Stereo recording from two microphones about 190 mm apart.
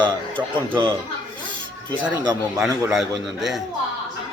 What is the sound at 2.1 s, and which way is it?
A man's voice, 20° right (ahead or behind).